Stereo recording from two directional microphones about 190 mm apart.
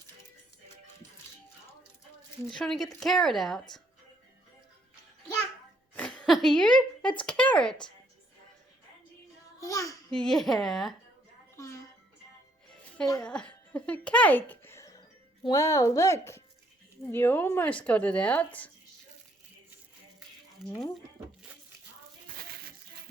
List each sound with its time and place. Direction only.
2.5 s speech: centre (ahead or behind)
5.9 s a sound: 5° left (ahead or behind)
6.2 s speech: centre (ahead or behind)
9.6 s a child's voice: 15° left (ahead or behind)
10.1 s speech: 5° left (ahead or behind)
11.5 s music: 15° left (ahead or behind)
13.2 s speech: 5° left (ahead or behind)
20.7 s speech: 5° left (ahead or behind)
22.4 s crushing: 55° right (ahead or behind)